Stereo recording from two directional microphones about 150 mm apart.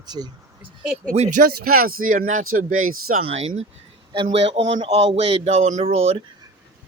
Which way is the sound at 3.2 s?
40° right (ahead or behind).